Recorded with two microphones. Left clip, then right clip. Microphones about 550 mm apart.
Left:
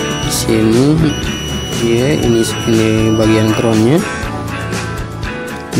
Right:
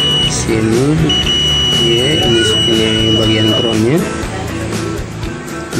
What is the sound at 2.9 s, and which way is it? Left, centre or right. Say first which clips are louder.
Music: even; left.